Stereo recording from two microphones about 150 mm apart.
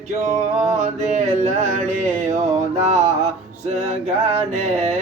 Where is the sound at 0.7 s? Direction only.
50° right (ahead or behind).